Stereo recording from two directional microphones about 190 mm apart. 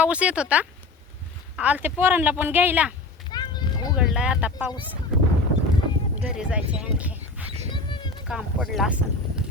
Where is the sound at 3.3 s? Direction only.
20° left (ahead or behind).